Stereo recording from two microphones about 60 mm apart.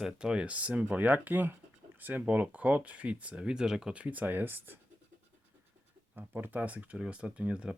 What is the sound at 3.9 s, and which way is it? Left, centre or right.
Speech, right.